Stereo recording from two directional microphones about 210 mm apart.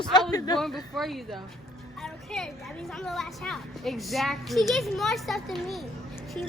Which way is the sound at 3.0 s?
Centre (ahead or behind).